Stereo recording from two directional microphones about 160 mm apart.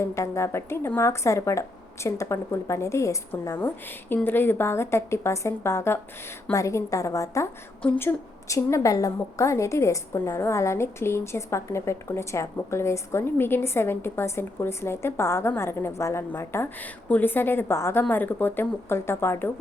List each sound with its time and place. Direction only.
0.0 s a woman's voice: 20° left (ahead or behind)